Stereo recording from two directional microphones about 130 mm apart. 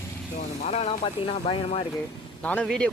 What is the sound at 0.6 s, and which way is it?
Speech, 55° left (ahead or behind).